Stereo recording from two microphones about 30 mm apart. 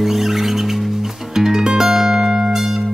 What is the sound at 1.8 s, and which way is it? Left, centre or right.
Music, centre.